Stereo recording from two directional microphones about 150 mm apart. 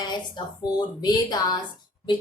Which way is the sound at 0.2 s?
30° left (ahead or behind).